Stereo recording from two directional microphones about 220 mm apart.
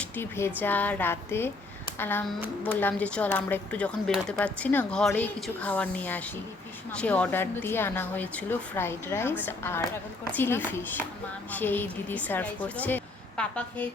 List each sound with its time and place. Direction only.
0.0 s a woman's voice: 10° left (ahead or behind)